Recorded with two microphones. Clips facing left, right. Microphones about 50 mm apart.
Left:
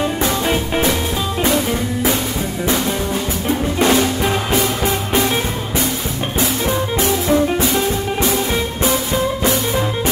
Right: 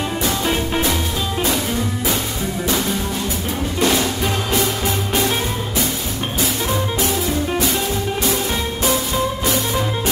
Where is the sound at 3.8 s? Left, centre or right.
Left.